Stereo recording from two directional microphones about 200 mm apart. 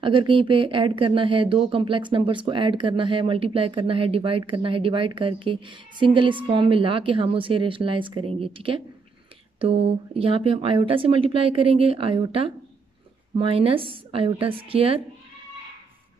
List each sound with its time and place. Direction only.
0.0 s speech: 25° right (ahead or behind)